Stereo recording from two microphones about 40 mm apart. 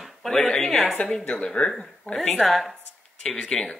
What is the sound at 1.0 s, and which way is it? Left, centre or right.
Speech, left.